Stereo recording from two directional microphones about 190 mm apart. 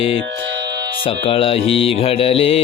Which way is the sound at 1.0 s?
30° left (ahead or behind).